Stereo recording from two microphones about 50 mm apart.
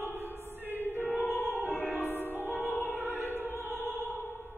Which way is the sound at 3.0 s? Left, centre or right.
Right.